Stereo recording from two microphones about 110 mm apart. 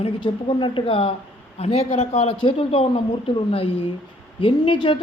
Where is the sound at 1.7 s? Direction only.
75° left (ahead or behind).